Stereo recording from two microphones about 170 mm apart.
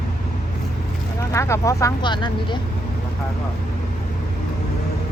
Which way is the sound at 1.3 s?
15° left (ahead or behind).